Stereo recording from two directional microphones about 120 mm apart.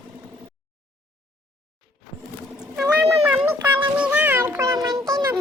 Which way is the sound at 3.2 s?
10° right (ahead or behind).